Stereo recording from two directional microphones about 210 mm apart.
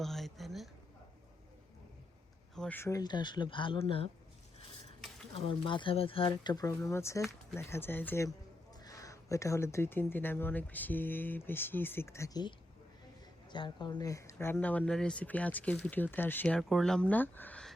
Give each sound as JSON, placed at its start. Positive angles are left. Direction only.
{"t": 0.0, "sound": "a sound", "side_deg": 0}
{"t": 2.6, "sound": "speech", "side_deg": 10}
{"t": 5.6, "sound": "speech", "side_deg": 25}